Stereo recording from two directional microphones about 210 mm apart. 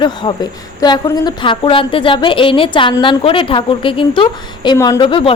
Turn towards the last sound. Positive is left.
turn(degrees=25)  # may be behind; listen again after turning